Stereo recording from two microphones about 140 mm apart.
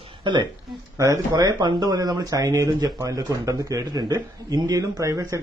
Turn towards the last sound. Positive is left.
turn(degrees=-25)  # may be behind; listen again after turning